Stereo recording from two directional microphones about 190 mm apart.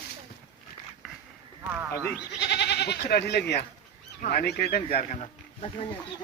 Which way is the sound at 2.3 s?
65° left (ahead or behind).